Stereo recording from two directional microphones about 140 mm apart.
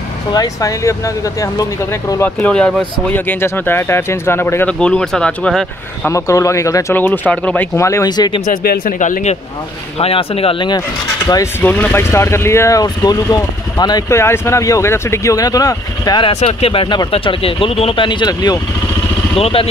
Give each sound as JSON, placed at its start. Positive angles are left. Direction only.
{"t": 0.3, "sound": "speech", "side_deg": 25}
{"t": 2.4, "sound": "speech", "side_deg": 10}
{"t": 6.0, "sound": "speech", "side_deg": 20}
{"t": 8.5, "sound": "speech", "side_deg": 85}
{"t": 9.9, "sound": "speech", "side_deg": 45}
{"t": 11.3, "sound": "speech", "side_deg": 25}
{"t": 11.6, "sound": "speech", "side_deg": 10}
{"t": 16.3, "sound": "speech", "side_deg": 45}
{"t": 19.3, "sound": "speech", "side_deg": 45}